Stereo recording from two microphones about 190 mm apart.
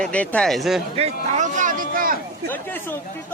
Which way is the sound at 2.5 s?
10° left (ahead or behind).